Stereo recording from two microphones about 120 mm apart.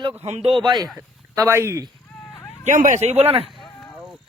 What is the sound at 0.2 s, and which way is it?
Speech, 60° right (ahead or behind).